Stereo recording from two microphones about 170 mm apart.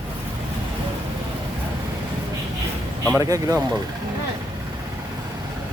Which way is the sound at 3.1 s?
20° right (ahead or behind).